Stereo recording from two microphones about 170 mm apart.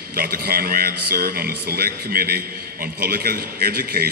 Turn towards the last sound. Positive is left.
turn(degrees=-60)  # may be behind; listen again after turning